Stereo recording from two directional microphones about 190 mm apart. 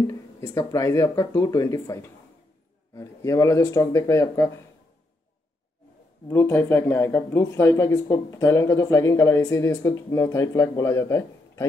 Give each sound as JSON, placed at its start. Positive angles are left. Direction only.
{"t": 0.1, "sound": "speech", "side_deg": 15}
{"t": 6.2, "sound": "speech", "side_deg": 10}